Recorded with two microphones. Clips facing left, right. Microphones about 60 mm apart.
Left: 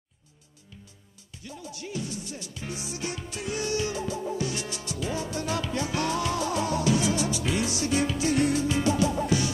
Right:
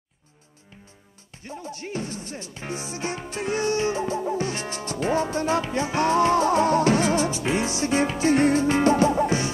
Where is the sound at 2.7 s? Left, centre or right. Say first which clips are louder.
Right 5 dB; right.